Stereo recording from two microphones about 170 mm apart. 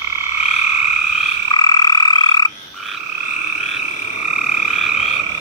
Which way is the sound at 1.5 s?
25° left (ahead or behind).